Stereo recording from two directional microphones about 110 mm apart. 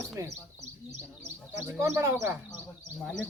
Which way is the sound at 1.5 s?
25° right (ahead or behind).